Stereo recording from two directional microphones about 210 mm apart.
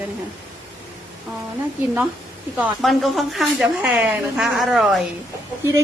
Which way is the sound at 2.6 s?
Centre (ahead or behind).